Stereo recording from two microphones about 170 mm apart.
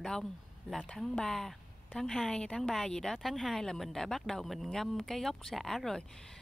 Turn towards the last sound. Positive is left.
turn(degrees=5)  # may be behind; listen again after turning